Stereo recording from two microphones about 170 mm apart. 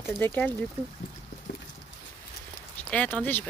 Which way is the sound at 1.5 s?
80° left.